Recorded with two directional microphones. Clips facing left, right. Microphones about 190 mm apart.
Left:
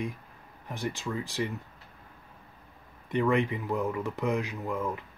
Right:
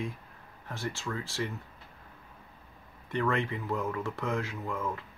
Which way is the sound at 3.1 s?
15° left (ahead or behind).